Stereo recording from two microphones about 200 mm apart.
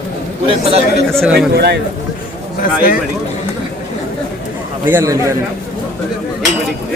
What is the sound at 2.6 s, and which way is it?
Speech, 45° left (ahead or behind).